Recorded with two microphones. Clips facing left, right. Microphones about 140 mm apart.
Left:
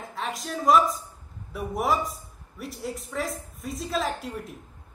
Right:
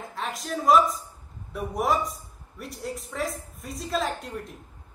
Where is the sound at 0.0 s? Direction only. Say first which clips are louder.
Left 1 dB; centre (ahead or behind).